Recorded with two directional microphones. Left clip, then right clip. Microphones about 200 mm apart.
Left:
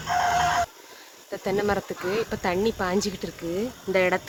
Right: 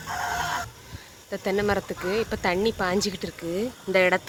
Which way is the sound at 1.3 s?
5° right (ahead or behind).